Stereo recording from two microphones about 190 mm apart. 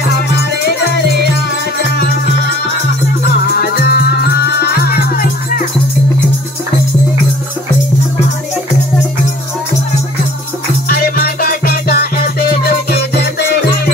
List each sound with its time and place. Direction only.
3.4 s music: 55° left (ahead or behind)
10.9 s music: 50° left (ahead or behind)